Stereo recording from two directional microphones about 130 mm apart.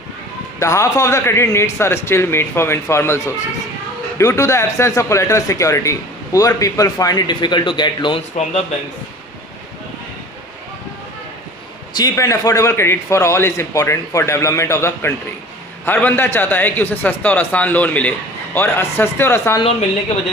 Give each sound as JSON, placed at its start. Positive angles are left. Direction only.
{"t": 0.6, "sound": "a man's voice", "side_deg": 25}
{"t": 12.0, "sound": "a man's voice", "side_deg": 25}